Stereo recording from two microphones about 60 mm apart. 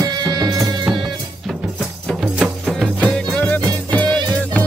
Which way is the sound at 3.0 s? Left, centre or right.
Centre.